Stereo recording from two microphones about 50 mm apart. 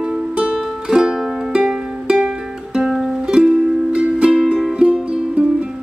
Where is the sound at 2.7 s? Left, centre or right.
Centre.